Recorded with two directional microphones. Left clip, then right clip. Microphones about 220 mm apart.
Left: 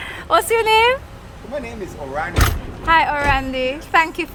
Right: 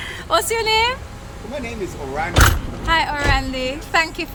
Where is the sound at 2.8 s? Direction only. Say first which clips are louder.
Left 3 dB; 15° left (ahead or behind).